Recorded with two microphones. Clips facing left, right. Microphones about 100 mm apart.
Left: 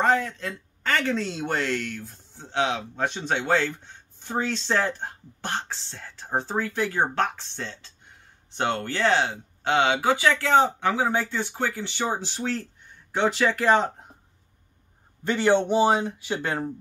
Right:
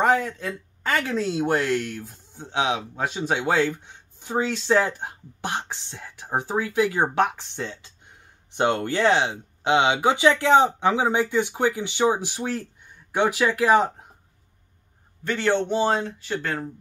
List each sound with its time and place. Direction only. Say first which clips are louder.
0.0 s speech: right 2 dB; 10° right (ahead or behind)
15.2 s speech: left 2 dB; 15° left (ahead or behind)